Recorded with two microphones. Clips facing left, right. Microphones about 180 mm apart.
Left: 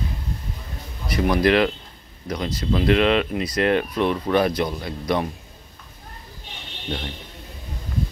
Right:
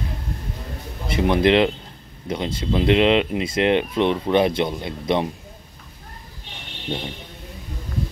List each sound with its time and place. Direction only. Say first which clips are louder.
1.0 s speech: right 1 dB; 25° right (ahead or behind)